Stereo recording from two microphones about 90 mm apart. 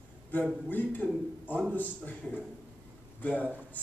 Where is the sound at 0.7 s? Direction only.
20° left (ahead or behind).